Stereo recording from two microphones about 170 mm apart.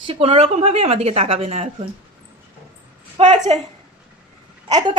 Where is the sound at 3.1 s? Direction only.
45° right (ahead or behind).